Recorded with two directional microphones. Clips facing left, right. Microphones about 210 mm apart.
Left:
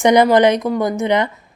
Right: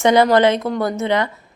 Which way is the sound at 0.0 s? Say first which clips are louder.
Left 2 dB; 15° left (ahead or behind).